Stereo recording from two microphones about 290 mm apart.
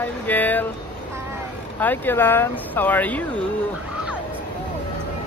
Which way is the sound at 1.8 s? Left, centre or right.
Centre.